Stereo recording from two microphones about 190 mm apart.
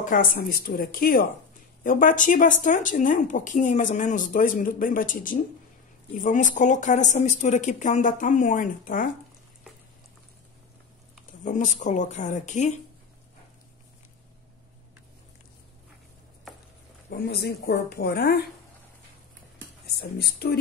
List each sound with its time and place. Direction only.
0.0 s a woman's voice: 45° left (ahead or behind)
11.4 s a woman's voice: 40° left (ahead or behind)
17.1 s speech: 55° left (ahead or behind)
20.0 s speech: 55° left (ahead or behind)